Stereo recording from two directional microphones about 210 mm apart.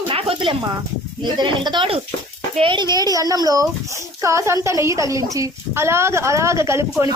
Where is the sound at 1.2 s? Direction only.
20° right (ahead or behind).